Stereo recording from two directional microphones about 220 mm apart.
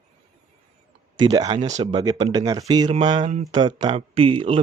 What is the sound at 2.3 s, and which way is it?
Speech, 20° right (ahead or behind).